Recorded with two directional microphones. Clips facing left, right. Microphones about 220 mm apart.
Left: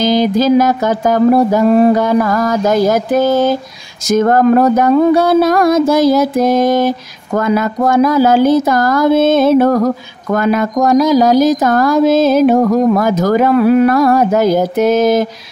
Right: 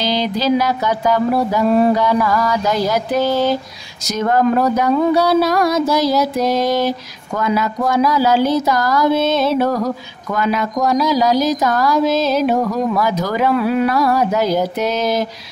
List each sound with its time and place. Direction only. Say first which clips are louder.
0.0 s speech: left 7 dB; 45° left (ahead or behind)